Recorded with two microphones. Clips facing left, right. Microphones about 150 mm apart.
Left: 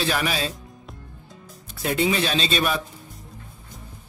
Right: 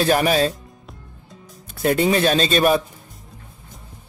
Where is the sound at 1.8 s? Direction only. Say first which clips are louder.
Right 5 dB; 45° right (ahead or behind).